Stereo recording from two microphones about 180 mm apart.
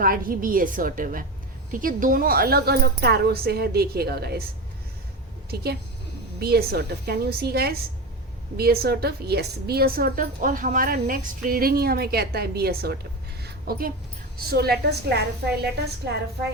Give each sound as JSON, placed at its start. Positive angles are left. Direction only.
{"t": 0.0, "sound": "a woman's voice", "side_deg": -50}
{"t": 5.5, "sound": "a woman's voice", "side_deg": -60}
{"t": 13.4, "sound": "a sound", "side_deg": -55}
{"t": 14.3, "sound": "a woman's voice", "side_deg": -60}